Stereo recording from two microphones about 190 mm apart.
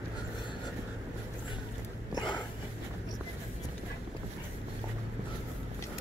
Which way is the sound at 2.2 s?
20° left (ahead or behind).